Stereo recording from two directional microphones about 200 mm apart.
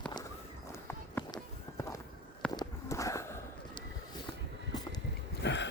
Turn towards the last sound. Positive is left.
turn(degrees=60)  # may be behind; listen again after turning